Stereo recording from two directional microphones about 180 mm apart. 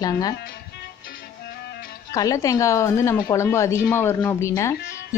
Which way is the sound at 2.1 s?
20° left (ahead or behind).